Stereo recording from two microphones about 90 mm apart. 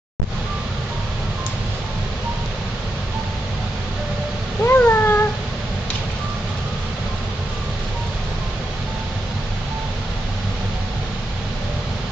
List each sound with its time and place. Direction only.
4.6 s cat: 25° left (ahead or behind)